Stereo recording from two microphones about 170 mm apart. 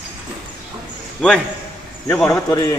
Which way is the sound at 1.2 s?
5° left (ahead or behind).